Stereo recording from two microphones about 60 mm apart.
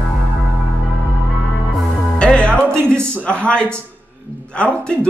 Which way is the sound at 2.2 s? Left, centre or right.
Centre.